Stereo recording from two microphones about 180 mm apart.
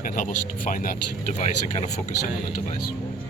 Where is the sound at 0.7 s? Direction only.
45° left (ahead or behind).